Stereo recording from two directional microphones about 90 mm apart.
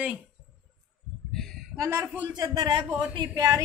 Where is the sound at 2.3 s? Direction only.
50° right (ahead or behind).